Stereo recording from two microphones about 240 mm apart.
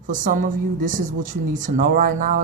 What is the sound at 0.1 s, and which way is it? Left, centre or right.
A woman's voice, right.